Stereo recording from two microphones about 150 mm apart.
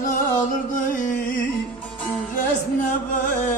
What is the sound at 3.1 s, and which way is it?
Music, 60° left (ahead or behind).